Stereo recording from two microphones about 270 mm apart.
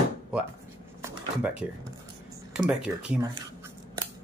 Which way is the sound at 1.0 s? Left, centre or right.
Centre.